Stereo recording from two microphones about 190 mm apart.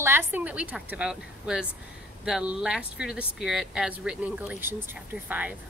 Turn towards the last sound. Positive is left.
turn(degrees=-10)  # may be behind; listen again after turning